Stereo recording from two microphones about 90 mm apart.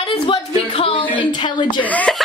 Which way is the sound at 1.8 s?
15° left (ahead or behind).